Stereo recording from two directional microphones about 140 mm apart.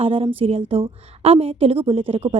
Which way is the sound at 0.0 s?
40° right (ahead or behind).